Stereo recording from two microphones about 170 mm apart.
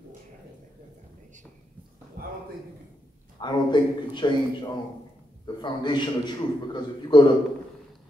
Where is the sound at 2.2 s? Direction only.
60° right (ahead or behind).